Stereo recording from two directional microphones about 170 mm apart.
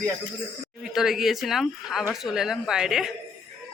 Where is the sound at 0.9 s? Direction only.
Centre (ahead or behind).